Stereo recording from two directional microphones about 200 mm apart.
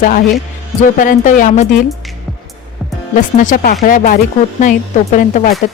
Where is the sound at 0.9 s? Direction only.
40° left (ahead or behind).